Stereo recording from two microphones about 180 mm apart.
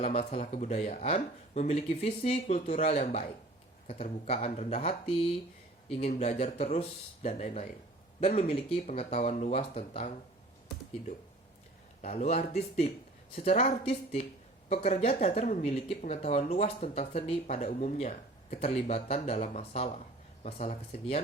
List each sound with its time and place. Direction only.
0.0 s speech: 35° left (ahead or behind)
12.0 s speech: 35° left (ahead or behind)